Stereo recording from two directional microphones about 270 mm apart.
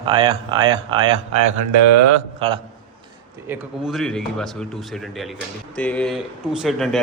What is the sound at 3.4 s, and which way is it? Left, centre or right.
A man's voice, centre.